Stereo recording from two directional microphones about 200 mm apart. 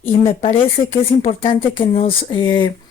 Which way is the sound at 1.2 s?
35° left (ahead or behind).